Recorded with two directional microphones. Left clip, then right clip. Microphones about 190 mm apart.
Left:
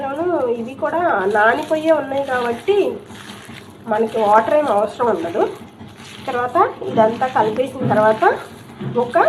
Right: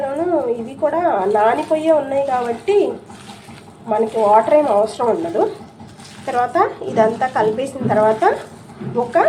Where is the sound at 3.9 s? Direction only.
15° right (ahead or behind).